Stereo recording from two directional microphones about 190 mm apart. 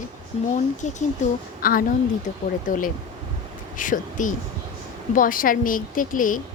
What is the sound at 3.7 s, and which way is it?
A woman's voice, 45° left (ahead or behind).